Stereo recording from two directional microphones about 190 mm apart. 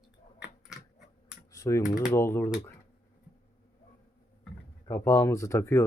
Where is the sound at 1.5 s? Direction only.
15° left (ahead or behind).